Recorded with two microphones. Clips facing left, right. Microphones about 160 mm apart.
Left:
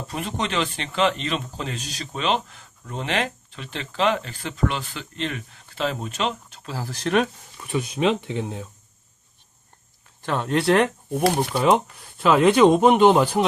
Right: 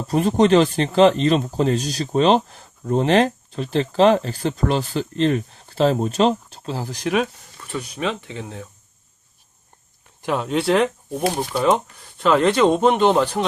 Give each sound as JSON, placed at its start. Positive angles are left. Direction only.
{"t": 0.1, "sound": "speech", "side_deg": -40}
{"t": 6.7, "sound": "speech", "side_deg": -15}
{"t": 7.6, "sound": "speech", "side_deg": 15}
{"t": 10.2, "sound": "a sound", "side_deg": -15}
{"t": 10.4, "sound": "speech", "side_deg": 0}